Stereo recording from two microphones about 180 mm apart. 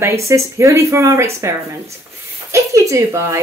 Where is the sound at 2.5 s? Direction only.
15° right (ahead or behind).